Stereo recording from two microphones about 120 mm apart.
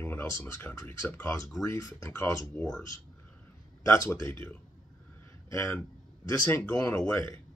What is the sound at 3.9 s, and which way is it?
Speech, 20° left (ahead or behind).